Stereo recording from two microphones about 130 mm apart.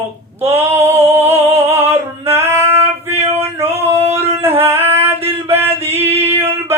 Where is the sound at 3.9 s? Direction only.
55° right (ahead or behind).